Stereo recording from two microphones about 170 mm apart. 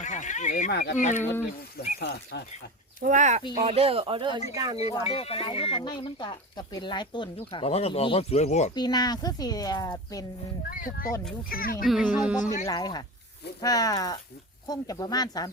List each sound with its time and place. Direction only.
0.0 s a sound: 45° left (ahead or behind)
0.7 s speech: 70° left (ahead or behind)
0.9 s speech: 45° left (ahead or behind)
1.2 s speech: 15° left (ahead or behind)
2.0 s speech: 75° left (ahead or behind)
3.0 s speech: 50° right (ahead or behind)
3.7 s speech: 35° right (ahead or behind)
4.8 s speech: 35° left (ahead or behind)
8.7 s speech: 25° left (ahead or behind)
10.7 s speech: 55° left (ahead or behind)
11.9 s speech: centre (ahead or behind)
12.6 s speech: 20° left (ahead or behind)